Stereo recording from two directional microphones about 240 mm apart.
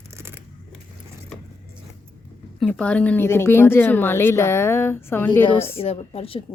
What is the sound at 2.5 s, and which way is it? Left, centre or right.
A woman's voice, centre.